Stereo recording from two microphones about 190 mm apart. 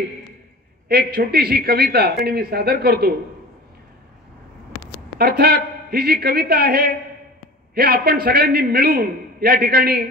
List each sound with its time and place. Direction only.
0.8 s a man's voice: 55° right (ahead or behind)
5.2 s a man's voice: 55° right (ahead or behind)